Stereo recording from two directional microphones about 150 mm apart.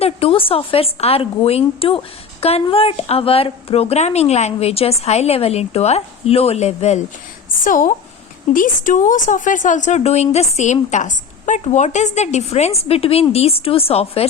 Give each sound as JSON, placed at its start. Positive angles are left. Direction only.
{"t": 0.0, "sound": "a woman's voice", "side_deg": 40}
{"t": 7.6, "sound": "a woman's voice", "side_deg": 60}